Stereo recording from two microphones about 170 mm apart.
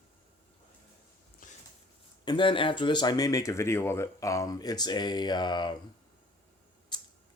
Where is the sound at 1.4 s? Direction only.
50° left (ahead or behind).